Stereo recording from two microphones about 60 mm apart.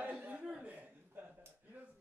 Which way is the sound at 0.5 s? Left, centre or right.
Right.